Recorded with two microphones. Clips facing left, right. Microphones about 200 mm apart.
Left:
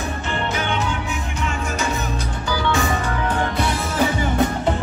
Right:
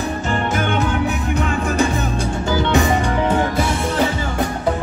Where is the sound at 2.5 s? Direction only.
20° right (ahead or behind).